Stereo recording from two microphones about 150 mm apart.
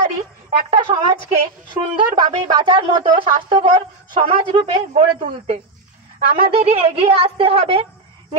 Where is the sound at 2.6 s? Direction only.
30° right (ahead or behind); by 5.5 s 50° right (ahead or behind).